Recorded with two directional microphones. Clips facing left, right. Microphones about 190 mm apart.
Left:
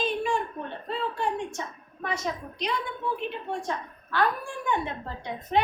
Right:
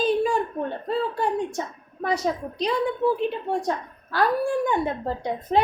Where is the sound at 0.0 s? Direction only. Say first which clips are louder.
Right 6 dB; 35° right (ahead or behind).